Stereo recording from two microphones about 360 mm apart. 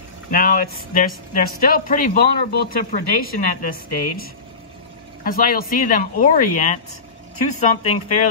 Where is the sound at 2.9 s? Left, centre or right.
Left.